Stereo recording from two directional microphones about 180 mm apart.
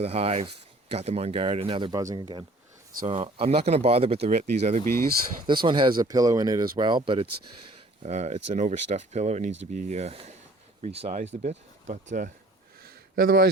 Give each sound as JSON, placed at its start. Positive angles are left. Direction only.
{"t": 0.0, "sound": "speech", "side_deg": -35}
{"t": 5.5, "sound": "speech", "side_deg": -25}
{"t": 13.1, "sound": "speech", "side_deg": -60}